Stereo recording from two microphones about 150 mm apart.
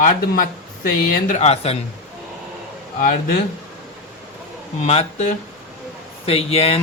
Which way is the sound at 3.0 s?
60° left (ahead or behind).